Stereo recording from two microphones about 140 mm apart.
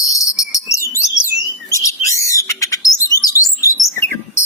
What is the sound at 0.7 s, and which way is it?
Bird, 20° left (ahead or behind).